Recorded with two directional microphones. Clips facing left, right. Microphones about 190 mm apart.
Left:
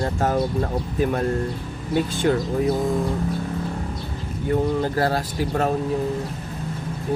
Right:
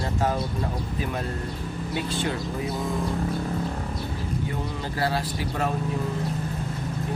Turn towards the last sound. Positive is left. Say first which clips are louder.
# left 5 dB
turn(degrees=45)  # may be behind; listen again after turning